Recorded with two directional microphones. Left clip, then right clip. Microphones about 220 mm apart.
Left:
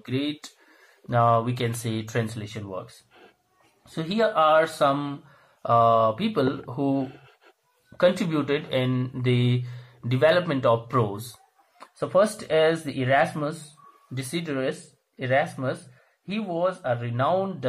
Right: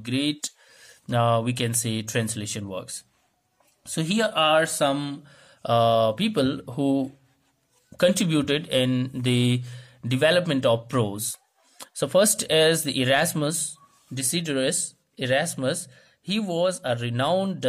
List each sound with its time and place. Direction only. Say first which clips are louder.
0.0 s speech: right 3 dB; 30° right (ahead or behind)
3.9 s speech: left 1 dB; 40° right (ahead or behind)
11.8 s speech: right 1 dB; 50° right (ahead or behind)
12.9 s speech: even; 50° right (ahead or behind)
13.3 s speech: right 3 dB; 40° right (ahead or behind)
16.8 s speech: even; 50° right (ahead or behind)
17.2 s speech: even; 35° right (ahead or behind)